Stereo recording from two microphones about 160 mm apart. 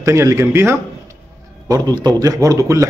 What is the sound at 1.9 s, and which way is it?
Speech, 25° right (ahead or behind).